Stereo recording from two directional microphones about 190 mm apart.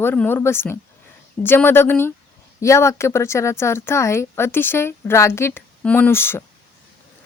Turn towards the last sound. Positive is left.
turn(degrees=10)  # may be behind; listen again after turning